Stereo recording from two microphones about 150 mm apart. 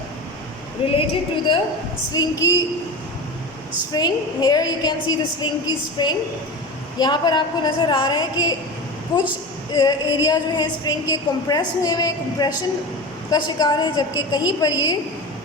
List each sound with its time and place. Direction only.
0.8 s a woman's voice: 40° left (ahead or behind)
2.1 s a woman's voice: 20° left (ahead or behind)
3.9 s a woman's voice: 25° left (ahead or behind)